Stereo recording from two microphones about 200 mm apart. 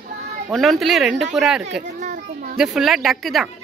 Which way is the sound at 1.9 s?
45° right (ahead or behind).